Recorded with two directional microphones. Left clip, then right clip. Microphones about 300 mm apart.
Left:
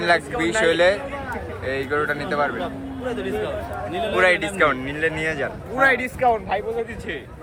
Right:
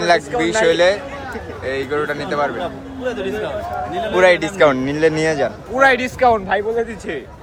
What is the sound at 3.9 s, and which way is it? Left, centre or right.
A man's voice, centre.